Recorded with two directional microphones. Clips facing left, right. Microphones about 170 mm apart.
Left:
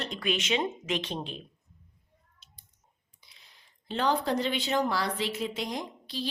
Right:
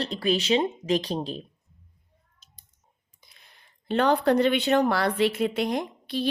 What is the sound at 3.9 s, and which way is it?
A woman's voice, 60° right (ahead or behind).